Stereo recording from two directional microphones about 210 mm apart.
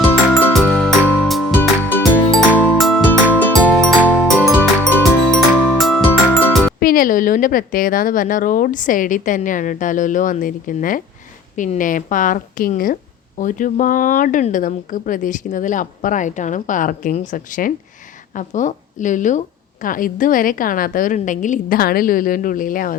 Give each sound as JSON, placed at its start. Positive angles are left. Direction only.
{"t": 0.3, "sound": "music", "side_deg": 5}
{"t": 6.7, "sound": "a woman's voice", "side_deg": 45}